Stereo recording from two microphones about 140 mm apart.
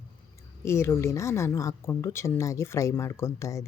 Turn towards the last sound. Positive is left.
turn(degrees=20)  # may be behind; listen again after turning